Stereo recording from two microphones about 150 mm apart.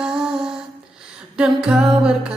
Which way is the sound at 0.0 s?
5° right (ahead or behind).